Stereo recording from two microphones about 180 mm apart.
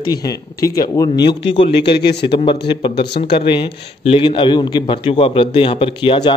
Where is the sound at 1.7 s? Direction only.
70° left (ahead or behind).